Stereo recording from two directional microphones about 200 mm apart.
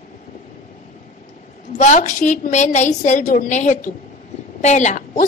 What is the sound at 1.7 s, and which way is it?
A woman's voice, 35° left (ahead or behind).